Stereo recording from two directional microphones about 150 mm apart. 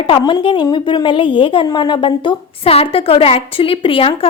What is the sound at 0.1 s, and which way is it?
A woman's voice, 30° left (ahead or behind).